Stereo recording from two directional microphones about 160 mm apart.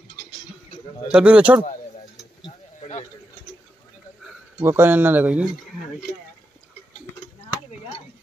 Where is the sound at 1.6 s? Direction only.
40° left (ahead or behind).